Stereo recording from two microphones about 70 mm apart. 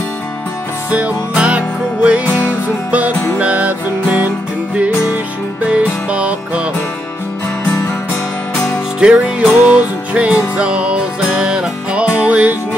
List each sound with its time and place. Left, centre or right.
0.8 s music: right
3.3 s music: centre
7.8 s music: left
9.0 s music: centre